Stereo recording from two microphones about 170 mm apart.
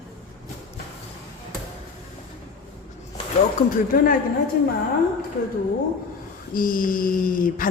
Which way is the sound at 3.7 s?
55° left (ahead or behind).